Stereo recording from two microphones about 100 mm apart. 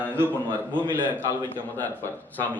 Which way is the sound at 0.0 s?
20° right (ahead or behind).